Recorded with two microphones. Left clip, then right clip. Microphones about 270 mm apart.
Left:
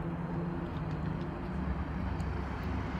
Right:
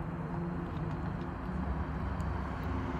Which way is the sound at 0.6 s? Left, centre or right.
Centre.